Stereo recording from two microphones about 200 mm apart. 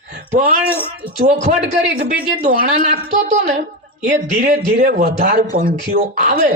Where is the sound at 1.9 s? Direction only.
45° right (ahead or behind).